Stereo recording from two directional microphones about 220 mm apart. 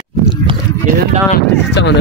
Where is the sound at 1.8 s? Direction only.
50° left (ahead or behind).